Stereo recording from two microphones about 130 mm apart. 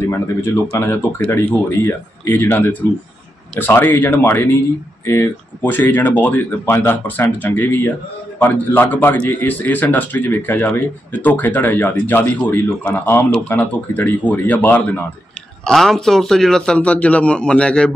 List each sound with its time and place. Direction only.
0.7 s speech: 15° left (ahead or behind)
15.6 s speech: 5° left (ahead or behind)